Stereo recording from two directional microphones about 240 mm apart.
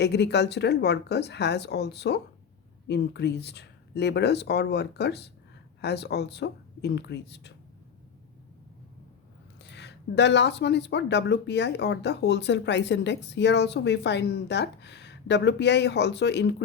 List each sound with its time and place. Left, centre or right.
0.0 s speech: left
9.6 s speech: left